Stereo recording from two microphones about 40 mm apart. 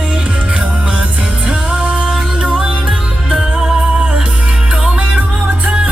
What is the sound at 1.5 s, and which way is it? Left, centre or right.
Music, right.